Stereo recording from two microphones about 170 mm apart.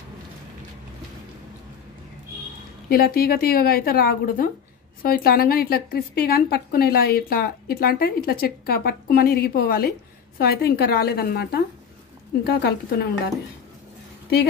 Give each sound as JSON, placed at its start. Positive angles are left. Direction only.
{"t": 2.9, "sound": "a woman's voice", "side_deg": 60}